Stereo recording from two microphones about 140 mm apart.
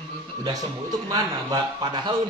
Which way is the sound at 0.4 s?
25° right (ahead or behind).